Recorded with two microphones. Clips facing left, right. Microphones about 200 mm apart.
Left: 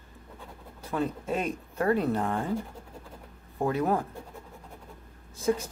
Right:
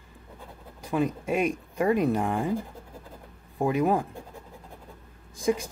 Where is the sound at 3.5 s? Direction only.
15° right (ahead or behind).